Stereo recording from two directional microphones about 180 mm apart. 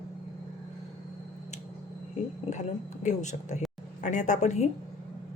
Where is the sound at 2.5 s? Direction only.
40° left (ahead or behind).